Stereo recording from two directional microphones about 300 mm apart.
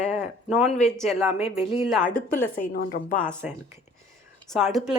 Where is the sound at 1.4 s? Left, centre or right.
Centre.